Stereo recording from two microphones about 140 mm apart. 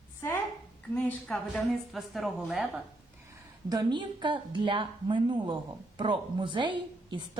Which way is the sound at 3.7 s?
30° right (ahead or behind).